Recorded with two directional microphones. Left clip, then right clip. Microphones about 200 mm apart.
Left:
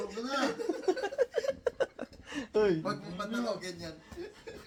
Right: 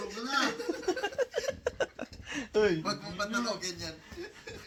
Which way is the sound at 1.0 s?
15° right (ahead or behind).